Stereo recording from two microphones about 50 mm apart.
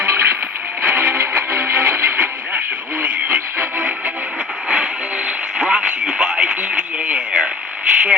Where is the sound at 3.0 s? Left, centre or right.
Right.